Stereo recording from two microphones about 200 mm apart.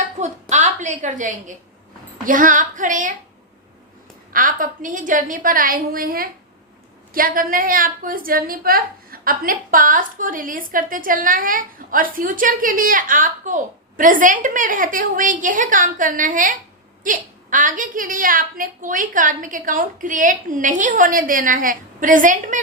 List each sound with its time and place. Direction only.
0.2 s a sound: 35° right (ahead or behind)
2.2 s a woman's voice: 40° right (ahead or behind)
4.3 s a woman's voice: 45° right (ahead or behind)